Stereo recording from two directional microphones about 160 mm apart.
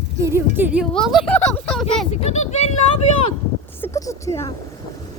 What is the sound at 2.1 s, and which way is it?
Speech, 40° left (ahead or behind).